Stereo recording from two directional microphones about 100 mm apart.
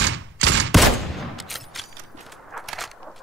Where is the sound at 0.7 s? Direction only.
Centre (ahead or behind).